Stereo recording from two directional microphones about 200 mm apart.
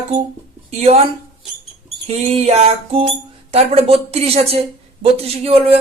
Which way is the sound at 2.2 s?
30° right (ahead or behind).